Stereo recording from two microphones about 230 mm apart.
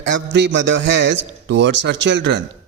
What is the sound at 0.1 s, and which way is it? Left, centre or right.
A man's voice, right.